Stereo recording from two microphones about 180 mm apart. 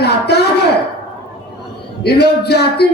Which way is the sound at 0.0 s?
65° left (ahead or behind).